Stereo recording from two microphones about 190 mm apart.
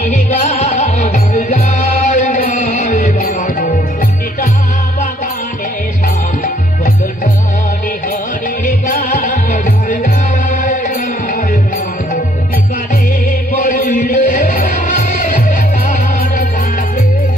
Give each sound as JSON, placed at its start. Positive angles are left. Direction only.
{"t": 0.0, "sound": "music", "side_deg": 35}
{"t": 8.6, "sound": "music", "side_deg": 45}
{"t": 13.7, "sound": "music", "side_deg": 45}